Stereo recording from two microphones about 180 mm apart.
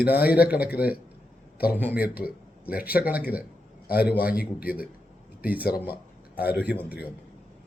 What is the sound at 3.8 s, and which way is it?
A man's voice, 60° left (ahead or behind).